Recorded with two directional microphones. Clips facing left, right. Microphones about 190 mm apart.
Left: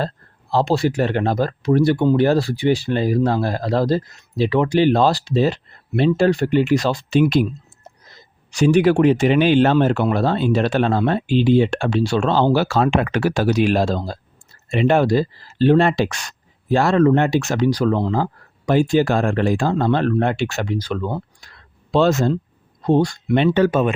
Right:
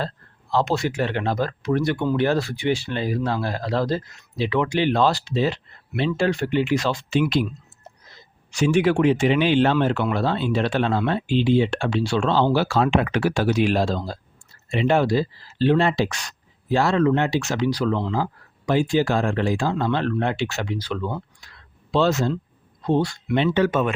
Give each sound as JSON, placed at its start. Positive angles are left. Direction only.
{"t": 0.5, "sound": "speech", "side_deg": 35}
{"t": 8.4, "sound": "speech", "side_deg": 40}
{"t": 23.5, "sound": "speech", "side_deg": 35}